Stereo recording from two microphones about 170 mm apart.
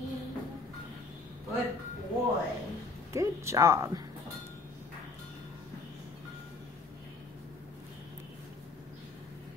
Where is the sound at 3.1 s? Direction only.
15° right (ahead or behind).